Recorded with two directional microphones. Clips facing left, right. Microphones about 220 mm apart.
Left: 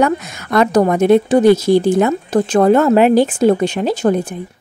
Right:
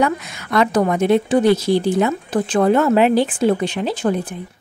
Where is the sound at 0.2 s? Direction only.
45° left (ahead or behind).